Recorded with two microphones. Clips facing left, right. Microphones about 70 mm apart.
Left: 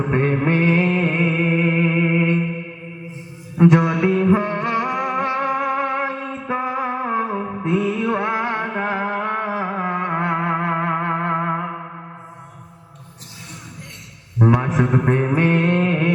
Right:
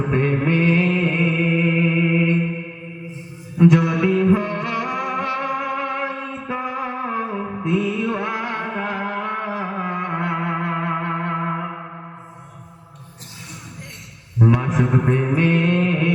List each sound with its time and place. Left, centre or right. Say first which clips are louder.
0.1 s music: left 1 dB; left
3.6 s music: left 1 dB; left
14.3 s mantra: left 1 dB; left